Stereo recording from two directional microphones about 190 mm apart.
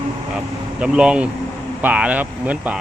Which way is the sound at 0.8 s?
5° right (ahead or behind).